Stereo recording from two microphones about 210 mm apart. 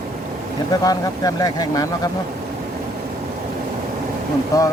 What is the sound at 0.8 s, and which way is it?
Speech, 15° left (ahead or behind).